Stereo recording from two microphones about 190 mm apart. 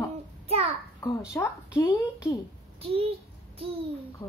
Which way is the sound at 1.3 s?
10° left (ahead or behind).